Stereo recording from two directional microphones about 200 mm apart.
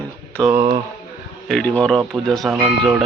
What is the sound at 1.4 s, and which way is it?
Speech, 5° left (ahead or behind).